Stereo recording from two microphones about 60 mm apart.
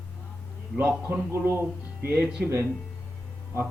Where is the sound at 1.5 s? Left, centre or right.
Right.